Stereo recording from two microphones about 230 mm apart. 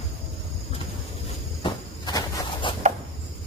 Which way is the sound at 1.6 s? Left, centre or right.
Left.